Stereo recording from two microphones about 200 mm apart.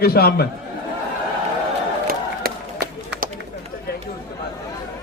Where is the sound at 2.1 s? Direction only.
50° right (ahead or behind).